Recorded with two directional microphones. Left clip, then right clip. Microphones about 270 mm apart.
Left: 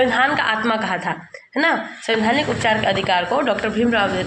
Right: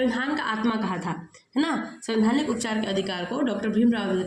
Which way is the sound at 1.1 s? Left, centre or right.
Centre.